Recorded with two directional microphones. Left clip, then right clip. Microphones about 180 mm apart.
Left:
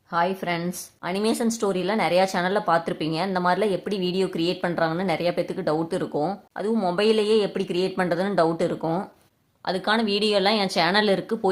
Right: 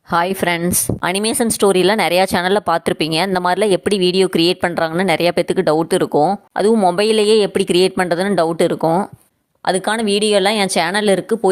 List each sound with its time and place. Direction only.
0.1 s a woman's voice: 55° right (ahead or behind); by 11.3 s 40° right (ahead or behind)